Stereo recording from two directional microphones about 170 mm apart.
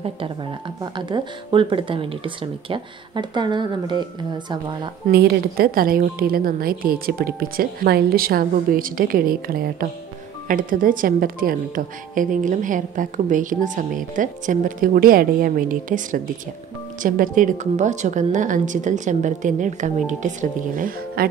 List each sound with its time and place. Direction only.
0.9 s speech: 25° right (ahead or behind)
5.1 s a woman's voice: 70° right (ahead or behind)